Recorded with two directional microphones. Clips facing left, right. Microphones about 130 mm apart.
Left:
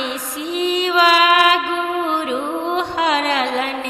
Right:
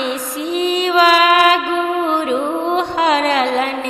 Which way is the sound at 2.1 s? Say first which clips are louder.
Right 4 dB; 45° right (ahead or behind).